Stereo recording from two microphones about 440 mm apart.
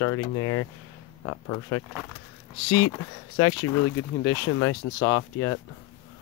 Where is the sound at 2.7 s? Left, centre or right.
Centre.